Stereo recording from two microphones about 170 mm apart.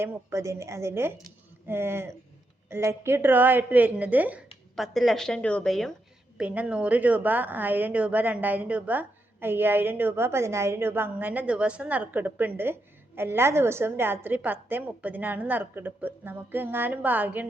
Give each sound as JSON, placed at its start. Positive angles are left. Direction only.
{"t": 0.0, "sound": "a woman's voice", "side_deg": -15}